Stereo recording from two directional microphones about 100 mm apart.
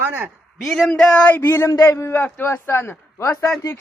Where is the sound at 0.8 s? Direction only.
10° left (ahead or behind).